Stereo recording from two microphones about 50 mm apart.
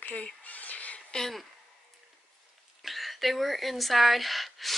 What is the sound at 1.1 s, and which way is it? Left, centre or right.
Speech, centre.